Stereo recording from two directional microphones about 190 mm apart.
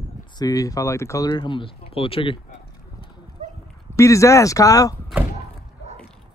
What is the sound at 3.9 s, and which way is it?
Speech, 15° left (ahead or behind).